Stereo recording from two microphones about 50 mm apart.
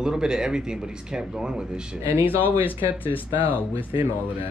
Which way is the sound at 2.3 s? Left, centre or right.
Left.